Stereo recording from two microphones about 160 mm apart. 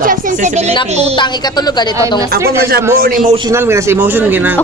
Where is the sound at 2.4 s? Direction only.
70° right (ahead or behind).